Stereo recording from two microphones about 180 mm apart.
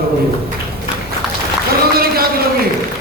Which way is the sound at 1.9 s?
55° right (ahead or behind).